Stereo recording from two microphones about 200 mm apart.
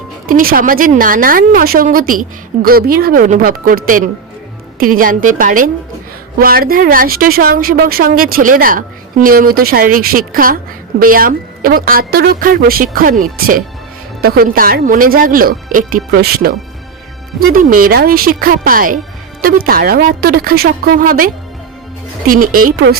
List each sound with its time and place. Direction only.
0.3 s speech: 45° right (ahead or behind)
22.3 s speech: 45° right (ahead or behind)